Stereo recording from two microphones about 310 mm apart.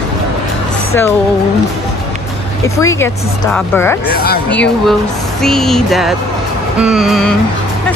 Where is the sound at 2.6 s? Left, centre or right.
Centre.